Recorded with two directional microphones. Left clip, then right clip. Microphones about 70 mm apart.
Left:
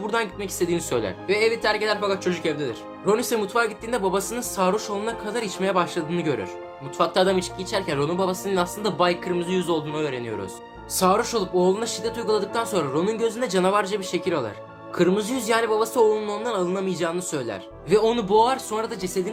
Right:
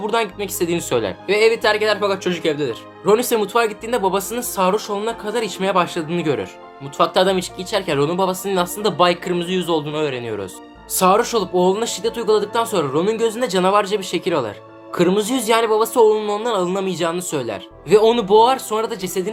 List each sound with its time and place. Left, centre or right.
0.0 s speech: right
9.2 s speech: right
9.5 s speech: right
15.2 s speech: right
15.4 s speech: right